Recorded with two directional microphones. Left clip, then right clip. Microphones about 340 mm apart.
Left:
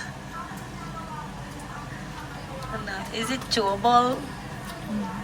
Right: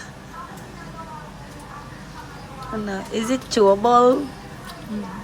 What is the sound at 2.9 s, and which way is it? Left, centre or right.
Speech, right.